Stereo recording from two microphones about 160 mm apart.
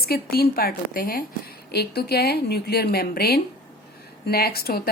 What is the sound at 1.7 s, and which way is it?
A woman's voice, 90° left.